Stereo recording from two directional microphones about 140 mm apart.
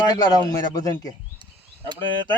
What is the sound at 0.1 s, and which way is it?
Speech, 30° left (ahead or behind).